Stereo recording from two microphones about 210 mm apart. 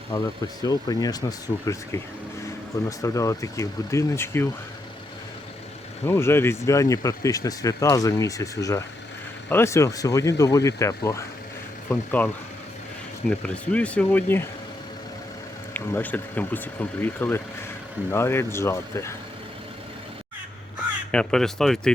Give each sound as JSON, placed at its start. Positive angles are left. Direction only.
{"t": 0.6, "sound": "speech", "side_deg": 20}
{"t": 3.0, "sound": "speech", "side_deg": 15}
{"t": 6.1, "sound": "speech", "side_deg": 10}
{"t": 13.4, "sound": "speech", "side_deg": 5}
{"t": 15.7, "sound": "speech", "side_deg": 10}
{"t": 21.1, "sound": "speech", "side_deg": 5}